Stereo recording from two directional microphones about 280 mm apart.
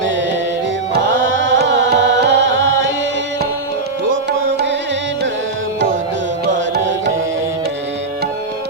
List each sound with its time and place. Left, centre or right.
0.9 s music: right
4.1 s music: right
6.4 s music: right